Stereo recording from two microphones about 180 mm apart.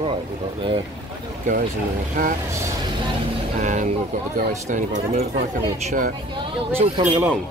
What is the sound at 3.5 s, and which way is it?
Speech, 45° right (ahead or behind).